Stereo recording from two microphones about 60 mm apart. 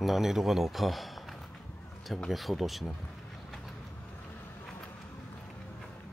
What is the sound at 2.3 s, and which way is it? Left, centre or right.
Speech, centre.